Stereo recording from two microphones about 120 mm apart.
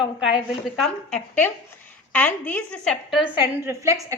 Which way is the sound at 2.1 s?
15° left (ahead or behind).